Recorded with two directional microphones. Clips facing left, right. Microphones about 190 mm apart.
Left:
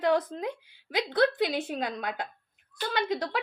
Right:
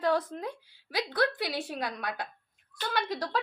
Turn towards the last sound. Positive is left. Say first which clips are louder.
# left 2 dB
turn(degrees=20)  # may be behind; listen again after turning